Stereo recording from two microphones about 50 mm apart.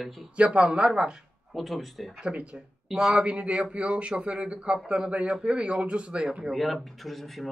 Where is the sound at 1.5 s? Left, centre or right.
Centre.